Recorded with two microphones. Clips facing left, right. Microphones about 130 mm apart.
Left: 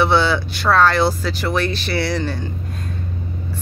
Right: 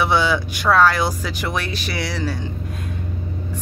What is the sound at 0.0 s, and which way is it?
Speech, 10° right (ahead or behind).